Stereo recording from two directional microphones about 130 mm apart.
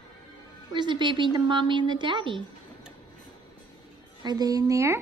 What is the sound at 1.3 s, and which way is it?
A woman's voice, 35° right (ahead or behind).